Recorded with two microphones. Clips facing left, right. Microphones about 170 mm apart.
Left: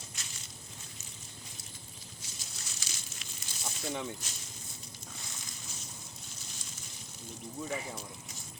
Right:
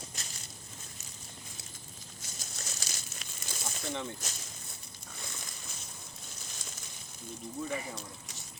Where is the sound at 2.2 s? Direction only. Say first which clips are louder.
Right 2 dB; 45° right (ahead or behind).